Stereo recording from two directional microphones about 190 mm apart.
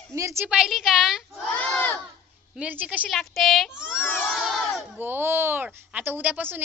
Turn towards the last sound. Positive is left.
turn(degrees=-10)  # may be behind; listen again after turning